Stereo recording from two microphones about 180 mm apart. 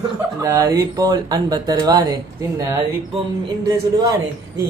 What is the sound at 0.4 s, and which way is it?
Speech, 15° right (ahead or behind).